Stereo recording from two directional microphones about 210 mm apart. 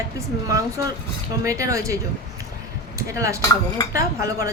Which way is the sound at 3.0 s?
15° right (ahead or behind).